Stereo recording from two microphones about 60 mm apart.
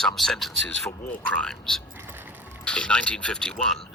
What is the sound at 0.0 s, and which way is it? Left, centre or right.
Speech, centre.